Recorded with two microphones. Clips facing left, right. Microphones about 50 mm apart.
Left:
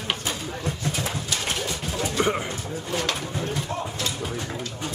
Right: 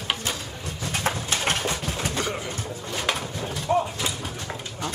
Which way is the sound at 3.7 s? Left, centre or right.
Centre.